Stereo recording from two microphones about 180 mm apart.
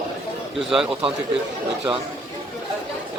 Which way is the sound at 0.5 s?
5° right (ahead or behind).